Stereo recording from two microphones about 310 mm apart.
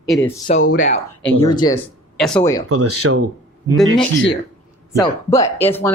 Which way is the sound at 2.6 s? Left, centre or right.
Right.